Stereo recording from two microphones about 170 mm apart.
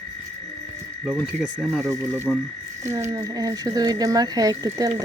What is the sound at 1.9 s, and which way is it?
Speech, 15° right (ahead or behind).